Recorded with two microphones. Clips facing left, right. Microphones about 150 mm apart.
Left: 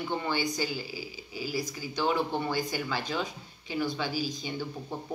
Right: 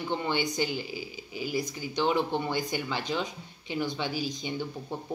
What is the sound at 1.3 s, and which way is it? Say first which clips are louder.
Speech: right 2 dB; 35° left (ahead or behind).